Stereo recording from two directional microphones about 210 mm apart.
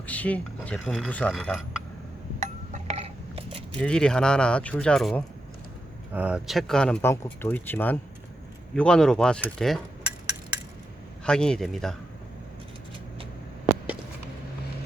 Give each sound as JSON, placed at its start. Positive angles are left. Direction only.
{"t": 0.0, "sound": "speech", "side_deg": 5}
{"t": 2.4, "sound": "a sound", "side_deg": -35}
{"t": 3.8, "sound": "speech", "side_deg": 5}